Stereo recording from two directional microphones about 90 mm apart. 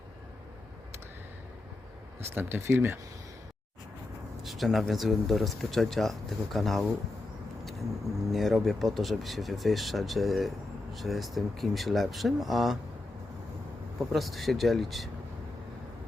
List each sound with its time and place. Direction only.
2.3 s speech: 25° right (ahead or behind)
4.4 s speech: centre (ahead or behind)
8.3 s speech: centre (ahead or behind)
14.1 s speech: centre (ahead or behind)